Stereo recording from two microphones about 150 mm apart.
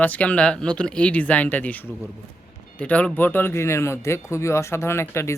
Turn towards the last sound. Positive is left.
turn(degrees=15)  # may be behind; listen again after turning